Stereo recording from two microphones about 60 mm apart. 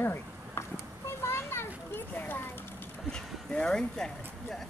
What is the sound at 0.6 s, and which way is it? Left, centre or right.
Children playing, left.